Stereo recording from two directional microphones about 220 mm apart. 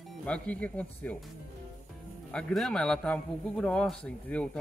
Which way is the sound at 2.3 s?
5° left (ahead or behind).